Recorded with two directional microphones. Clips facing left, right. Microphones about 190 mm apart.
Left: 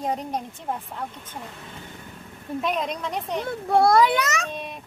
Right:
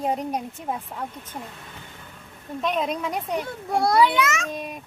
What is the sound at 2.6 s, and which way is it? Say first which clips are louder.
Speech: right 2 dB; centre (ahead or behind).